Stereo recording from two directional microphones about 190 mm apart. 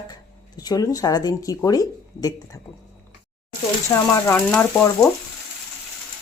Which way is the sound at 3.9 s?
15° left (ahead or behind).